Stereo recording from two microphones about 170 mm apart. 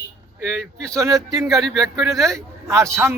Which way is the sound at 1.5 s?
Centre (ahead or behind).